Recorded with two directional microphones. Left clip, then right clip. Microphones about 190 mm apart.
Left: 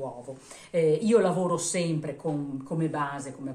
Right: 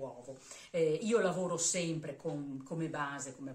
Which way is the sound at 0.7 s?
20° left (ahead or behind).